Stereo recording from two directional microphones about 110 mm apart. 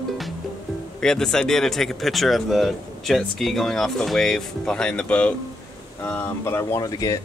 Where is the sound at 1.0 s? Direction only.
5° left (ahead or behind); by 7.1 s 35° left (ahead or behind).